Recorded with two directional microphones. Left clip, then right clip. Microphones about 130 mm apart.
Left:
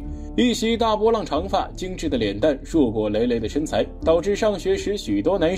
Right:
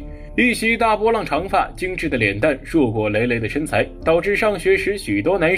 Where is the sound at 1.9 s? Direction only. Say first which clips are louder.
Right 4 dB; 20° left (ahead or behind).